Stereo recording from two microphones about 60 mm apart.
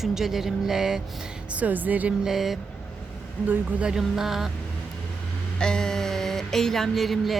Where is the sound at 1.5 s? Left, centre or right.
Right.